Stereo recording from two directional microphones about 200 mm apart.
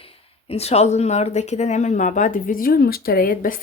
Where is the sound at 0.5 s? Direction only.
30° left (ahead or behind).